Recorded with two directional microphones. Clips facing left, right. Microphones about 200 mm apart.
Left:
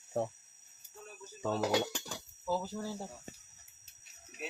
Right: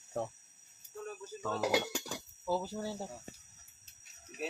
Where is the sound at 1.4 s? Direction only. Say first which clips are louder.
Left 4 dB; 20° left (ahead or behind).